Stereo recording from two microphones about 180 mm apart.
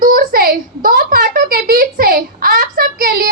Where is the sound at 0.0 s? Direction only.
50° right (ahead or behind).